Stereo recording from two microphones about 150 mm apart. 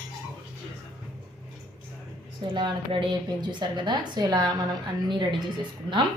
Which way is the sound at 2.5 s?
35° right (ahead or behind).